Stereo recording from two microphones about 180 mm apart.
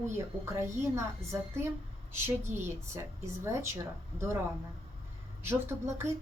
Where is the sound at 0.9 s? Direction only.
15° right (ahead or behind).